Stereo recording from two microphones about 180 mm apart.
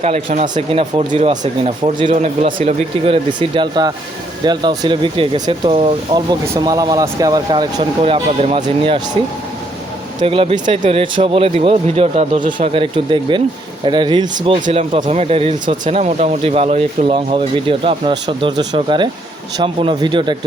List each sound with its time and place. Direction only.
0.0 s speech: 35° right (ahead or behind)
2.1 s speech: 40° right (ahead or behind)
3.2 s speech: 25° right (ahead or behind)
6.4 s speech: 15° right (ahead or behind)
10.2 s speech: 30° right (ahead or behind)
12.5 s speech: 30° right (ahead or behind)